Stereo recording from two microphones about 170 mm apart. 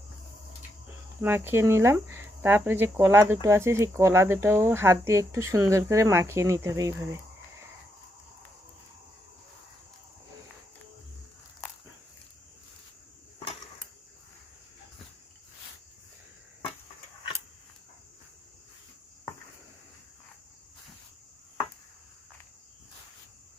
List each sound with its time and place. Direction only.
1.2 s speech: 15° right (ahead or behind)